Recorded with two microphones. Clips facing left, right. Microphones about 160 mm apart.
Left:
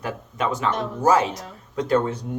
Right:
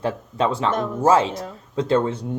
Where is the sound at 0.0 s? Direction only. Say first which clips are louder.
Right 4 dB; 30° right (ahead or behind).